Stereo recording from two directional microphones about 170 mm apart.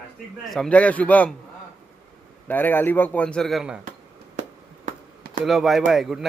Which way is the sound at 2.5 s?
10° left (ahead or behind).